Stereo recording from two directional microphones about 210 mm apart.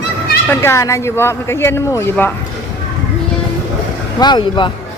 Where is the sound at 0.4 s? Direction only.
10° left (ahead or behind).